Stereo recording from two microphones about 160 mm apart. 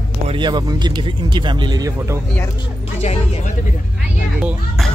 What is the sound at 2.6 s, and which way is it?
Speech, 40° left (ahead or behind).